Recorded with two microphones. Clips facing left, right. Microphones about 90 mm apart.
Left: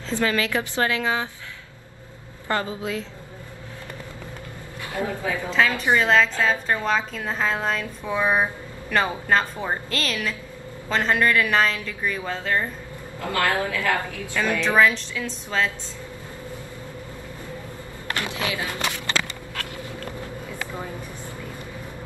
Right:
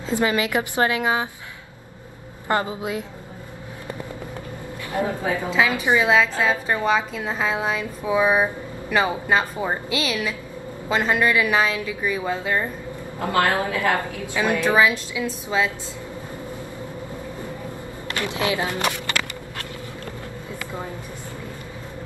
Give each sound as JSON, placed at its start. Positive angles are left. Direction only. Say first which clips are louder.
{"t": 0.1, "sound": "a woman's voice", "louder": "right 2 dB", "side_deg": -20}
{"t": 2.4, "sound": "a woman's voice", "louder": "right 3 dB", "side_deg": -20}
{"t": 4.9, "sound": "a woman's voice", "louder": "right 3 dB", "side_deg": -20}
{"t": 5.5, "sound": "a woman's voice", "louder": "even", "side_deg": -10}
{"t": 13.2, "sound": "a woman's voice", "louder": "right 3 dB", "side_deg": -25}
{"t": 18.3, "sound": "a woman's voice", "louder": "right 5 dB", "side_deg": -20}